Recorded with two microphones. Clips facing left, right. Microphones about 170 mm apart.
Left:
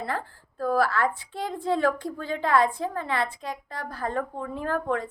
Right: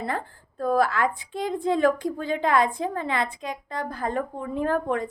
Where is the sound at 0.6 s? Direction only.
20° right (ahead or behind).